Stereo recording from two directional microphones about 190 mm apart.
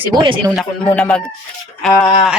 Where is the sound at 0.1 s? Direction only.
25° right (ahead or behind).